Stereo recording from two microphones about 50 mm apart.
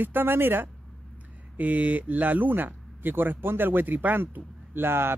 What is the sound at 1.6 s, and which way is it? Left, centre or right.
Speech, right.